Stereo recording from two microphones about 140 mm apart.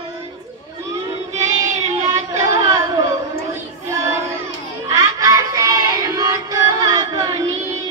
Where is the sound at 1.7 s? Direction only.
55° right (ahead or behind).